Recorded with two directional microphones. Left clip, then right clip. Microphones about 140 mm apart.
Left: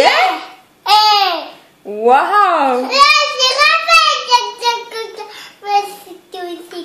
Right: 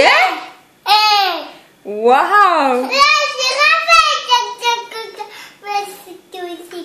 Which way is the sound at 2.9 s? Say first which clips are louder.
Left 3 dB; 20° left (ahead or behind).